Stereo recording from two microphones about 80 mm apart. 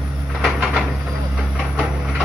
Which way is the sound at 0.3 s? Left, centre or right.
Centre.